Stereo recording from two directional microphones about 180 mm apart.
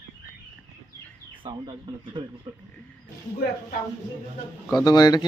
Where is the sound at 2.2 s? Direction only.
30° right (ahead or behind).